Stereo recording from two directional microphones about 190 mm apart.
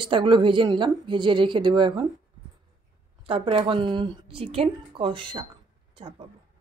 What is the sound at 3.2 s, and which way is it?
A woman's voice, 30° right (ahead or behind).